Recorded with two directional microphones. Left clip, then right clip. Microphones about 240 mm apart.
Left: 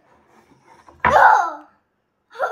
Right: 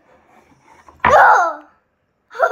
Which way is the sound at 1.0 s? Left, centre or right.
Right.